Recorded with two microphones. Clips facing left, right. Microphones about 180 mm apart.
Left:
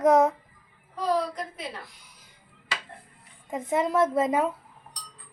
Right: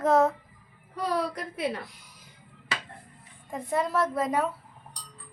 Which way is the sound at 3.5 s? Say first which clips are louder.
Left 3 dB; 20° left (ahead or behind).